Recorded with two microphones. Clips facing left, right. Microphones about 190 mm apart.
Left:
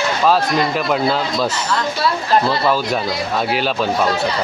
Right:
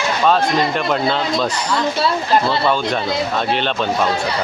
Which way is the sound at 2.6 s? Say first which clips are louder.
Even; 5° left (ahead or behind).